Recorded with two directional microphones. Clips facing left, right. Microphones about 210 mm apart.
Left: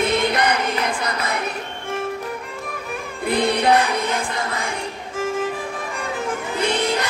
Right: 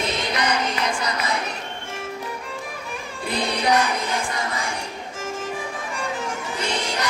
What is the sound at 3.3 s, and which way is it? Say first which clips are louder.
Music: left 5 dB; 55° left (ahead or behind).